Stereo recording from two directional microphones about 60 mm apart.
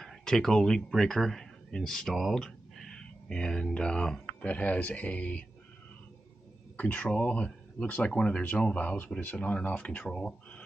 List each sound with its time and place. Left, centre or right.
0.0 s speech: centre; by 5.4 s left
6.8 s speech: left